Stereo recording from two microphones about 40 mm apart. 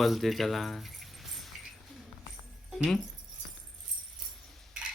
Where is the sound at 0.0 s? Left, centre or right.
Centre.